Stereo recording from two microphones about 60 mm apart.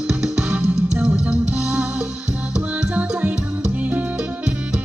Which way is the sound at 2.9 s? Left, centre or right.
Right.